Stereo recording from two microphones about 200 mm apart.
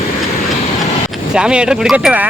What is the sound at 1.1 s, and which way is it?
Speech, 5° right (ahead or behind).